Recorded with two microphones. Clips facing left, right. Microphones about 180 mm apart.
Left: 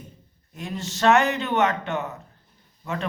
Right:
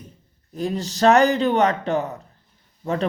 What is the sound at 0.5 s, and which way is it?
Speech, 35° right (ahead or behind).